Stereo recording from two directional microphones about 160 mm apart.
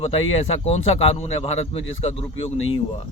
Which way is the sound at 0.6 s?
40° left (ahead or behind).